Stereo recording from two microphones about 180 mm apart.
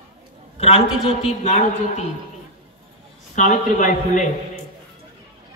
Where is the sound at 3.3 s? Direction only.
45° left (ahead or behind).